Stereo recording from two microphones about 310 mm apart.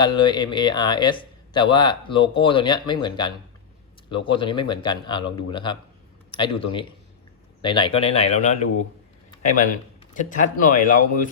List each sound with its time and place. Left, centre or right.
0.0 s a man's voice: centre
10.2 s speech: left